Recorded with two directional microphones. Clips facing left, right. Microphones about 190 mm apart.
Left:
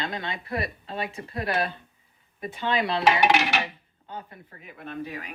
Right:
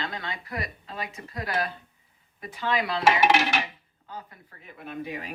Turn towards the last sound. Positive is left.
turn(degrees=-10)  # may be behind; listen again after turning